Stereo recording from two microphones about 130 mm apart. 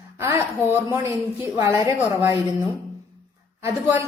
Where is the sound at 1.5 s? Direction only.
20° right (ahead or behind).